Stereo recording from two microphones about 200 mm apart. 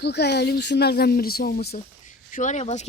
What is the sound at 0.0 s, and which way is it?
Speech, 55° left (ahead or behind).